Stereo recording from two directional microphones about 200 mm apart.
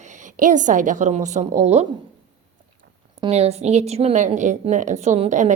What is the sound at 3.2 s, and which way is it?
A woman's voice, 30° right (ahead or behind).